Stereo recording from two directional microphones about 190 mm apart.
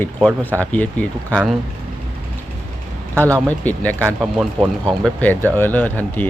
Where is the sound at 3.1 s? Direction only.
15° right (ahead or behind).